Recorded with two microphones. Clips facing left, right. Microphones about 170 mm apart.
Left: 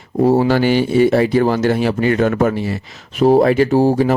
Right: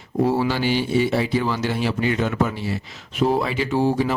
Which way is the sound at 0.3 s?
45° left (ahead or behind).